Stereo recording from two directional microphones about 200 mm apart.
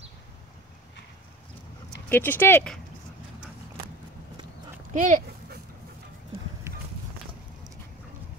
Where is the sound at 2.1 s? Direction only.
10° left (ahead or behind).